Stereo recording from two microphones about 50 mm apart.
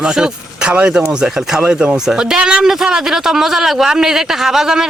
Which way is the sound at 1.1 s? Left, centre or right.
Centre.